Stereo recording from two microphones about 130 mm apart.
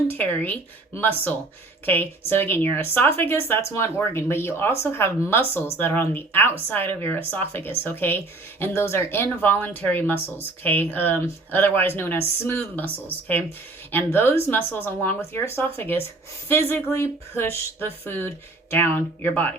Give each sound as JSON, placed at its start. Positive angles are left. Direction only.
{"t": 0.1, "sound": "speech", "side_deg": 15}
{"t": 13.9, "sound": "speech", "side_deg": 15}